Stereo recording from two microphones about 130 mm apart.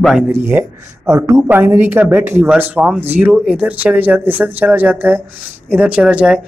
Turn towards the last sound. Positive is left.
turn(degrees=-5)  # may be behind; listen again after turning